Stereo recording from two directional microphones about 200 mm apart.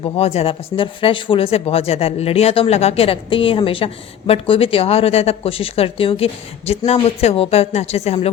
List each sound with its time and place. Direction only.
0.0 s speech: 30° left (ahead or behind)